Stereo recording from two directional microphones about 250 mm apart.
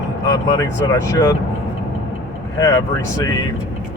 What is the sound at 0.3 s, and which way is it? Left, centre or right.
Speech, centre.